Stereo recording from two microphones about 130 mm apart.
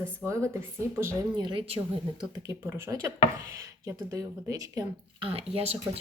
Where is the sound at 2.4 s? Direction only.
20° right (ahead or behind).